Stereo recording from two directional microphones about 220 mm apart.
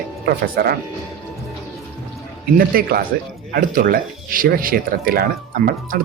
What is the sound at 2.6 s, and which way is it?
Speech, 40° right (ahead or behind).